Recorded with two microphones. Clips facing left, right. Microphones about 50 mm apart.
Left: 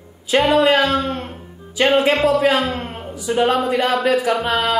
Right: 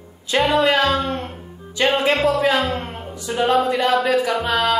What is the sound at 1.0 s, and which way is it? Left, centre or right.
Speech, centre.